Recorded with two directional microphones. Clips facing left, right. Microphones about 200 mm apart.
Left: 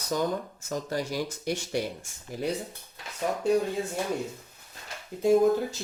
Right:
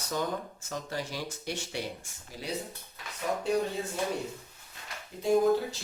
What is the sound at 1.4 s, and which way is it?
Speech, 45° left (ahead or behind).